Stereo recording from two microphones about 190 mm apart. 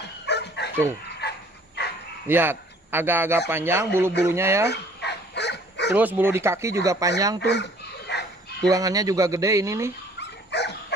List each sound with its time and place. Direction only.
0.3 s bow-wow: 60° left (ahead or behind)
2.2 s a man's voice: 10° right (ahead or behind)
4.6 s dog: 65° left (ahead or behind)
5.9 s a man's voice: 10° right (ahead or behind)
7.3 s chicken: 65° left (ahead or behind)
8.6 s a man's voice: 20° right (ahead or behind)
10.1 s dog: 65° left (ahead or behind)